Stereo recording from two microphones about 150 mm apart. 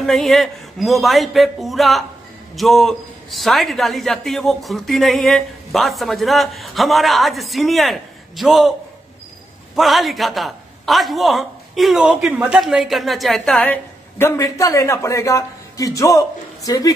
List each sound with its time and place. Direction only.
0.0 s a man's voice: centre (ahead or behind)
9.8 s a man's voice: centre (ahead or behind); by 16.9 s 25° left (ahead or behind)